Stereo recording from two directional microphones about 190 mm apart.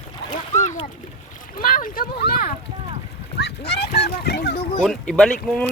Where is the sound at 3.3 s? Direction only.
60° left (ahead or behind).